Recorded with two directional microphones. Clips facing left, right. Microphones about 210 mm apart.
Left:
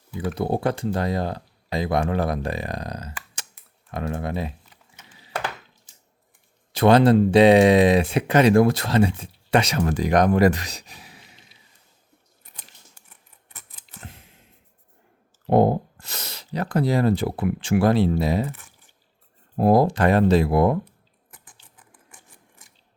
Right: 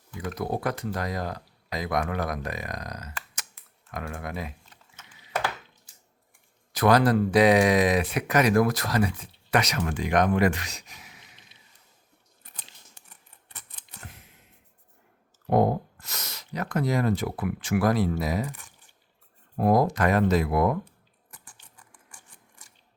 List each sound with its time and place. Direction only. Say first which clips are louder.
0.3 s speech: left 5 dB; 30° left (ahead or behind)
3.5 s computer keyboard: left 5 dB; 30° left (ahead or behind)
6.7 s speech: left 5 dB; 25° left (ahead or behind)
14.0 s a sound: left 4 dB; 30° left (ahead or behind)
15.4 s speech: left 4 dB; 30° left (ahead or behind)
19.5 s speech: left 4 dB; 30° left (ahead or behind)
21.6 s patter: left 1 dB; centre (ahead or behind)